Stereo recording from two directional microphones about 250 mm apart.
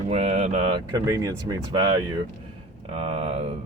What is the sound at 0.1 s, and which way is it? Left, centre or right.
Speech, right.